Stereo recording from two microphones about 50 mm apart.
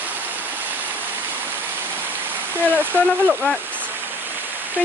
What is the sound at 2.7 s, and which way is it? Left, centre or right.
Speech, right.